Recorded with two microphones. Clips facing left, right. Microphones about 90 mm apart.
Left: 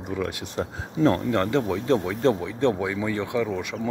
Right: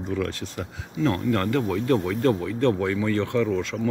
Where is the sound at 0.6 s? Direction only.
30° left (ahead or behind).